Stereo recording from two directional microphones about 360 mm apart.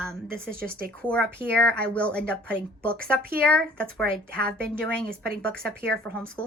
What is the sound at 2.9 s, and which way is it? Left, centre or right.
Speech, right.